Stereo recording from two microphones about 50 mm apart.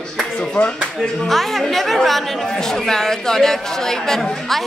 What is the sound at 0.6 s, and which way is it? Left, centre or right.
Speech, left.